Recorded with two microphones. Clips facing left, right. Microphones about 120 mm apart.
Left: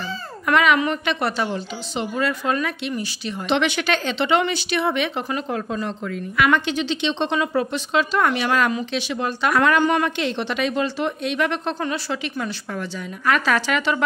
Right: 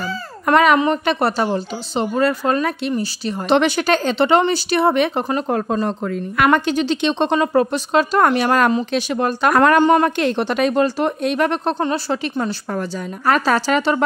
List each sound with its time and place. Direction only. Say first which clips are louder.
0.5 s a woman's voice: right 4 dB; 40° right (ahead or behind)